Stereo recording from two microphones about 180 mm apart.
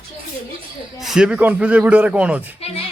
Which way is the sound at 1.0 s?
5° right (ahead or behind).